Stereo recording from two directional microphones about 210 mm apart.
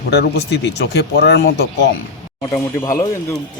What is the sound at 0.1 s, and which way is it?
Speech, 50° left (ahead or behind).